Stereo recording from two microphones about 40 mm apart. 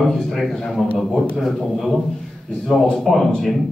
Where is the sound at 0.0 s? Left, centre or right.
Centre.